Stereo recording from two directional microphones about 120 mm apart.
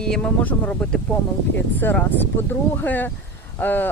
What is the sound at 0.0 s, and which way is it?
Speech, 10° left (ahead or behind).